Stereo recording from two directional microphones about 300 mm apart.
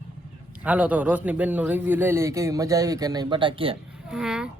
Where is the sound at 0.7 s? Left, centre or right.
Centre.